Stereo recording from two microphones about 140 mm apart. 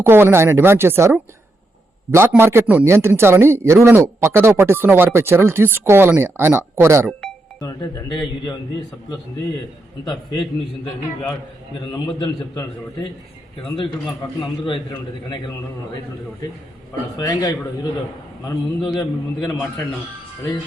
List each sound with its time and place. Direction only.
0.0 s a man's voice: 15° right (ahead or behind)
7.6 s speech: 25° left (ahead or behind)
11.9 s a man's voice: 30° left (ahead or behind)
17.2 s speech: 30° left (ahead or behind)
18.9 s speech: 30° left (ahead or behind)